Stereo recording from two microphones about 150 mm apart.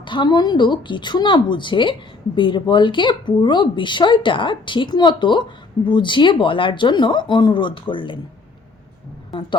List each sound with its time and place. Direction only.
0.0 s speech: 30° left (ahead or behind)